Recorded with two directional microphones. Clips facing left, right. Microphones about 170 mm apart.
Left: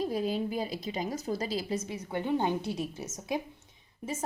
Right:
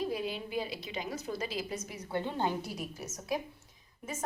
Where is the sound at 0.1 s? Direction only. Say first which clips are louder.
Left 4 dB; 40° left (ahead or behind).